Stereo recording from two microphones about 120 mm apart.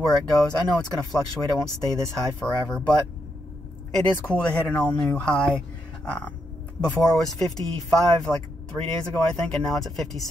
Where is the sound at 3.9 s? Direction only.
10° left (ahead or behind).